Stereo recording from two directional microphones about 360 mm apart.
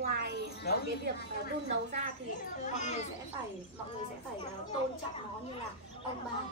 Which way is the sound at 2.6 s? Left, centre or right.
Centre.